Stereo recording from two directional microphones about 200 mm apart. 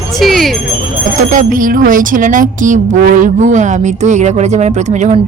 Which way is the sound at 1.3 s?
45° right (ahead or behind).